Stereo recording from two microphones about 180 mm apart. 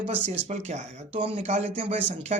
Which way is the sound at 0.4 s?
40° right (ahead or behind).